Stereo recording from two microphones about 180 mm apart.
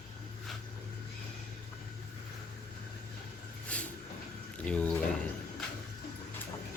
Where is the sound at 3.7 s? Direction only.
5° left (ahead or behind).